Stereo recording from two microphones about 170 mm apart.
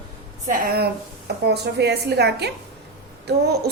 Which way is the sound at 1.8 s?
75° right (ahead or behind).